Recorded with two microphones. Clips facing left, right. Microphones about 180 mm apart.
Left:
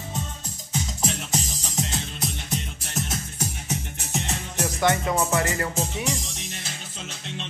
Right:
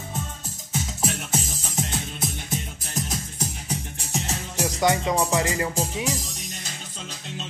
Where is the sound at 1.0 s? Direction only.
5° right (ahead or behind).